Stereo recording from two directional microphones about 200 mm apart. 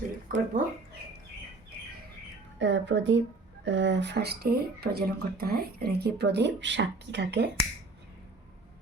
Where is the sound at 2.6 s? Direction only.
65° right (ahead or behind).